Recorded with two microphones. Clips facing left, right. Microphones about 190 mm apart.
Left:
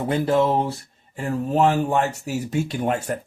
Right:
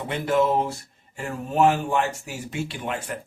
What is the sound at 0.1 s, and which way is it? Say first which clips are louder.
Speech: left 2 dB; 35° left (ahead or behind).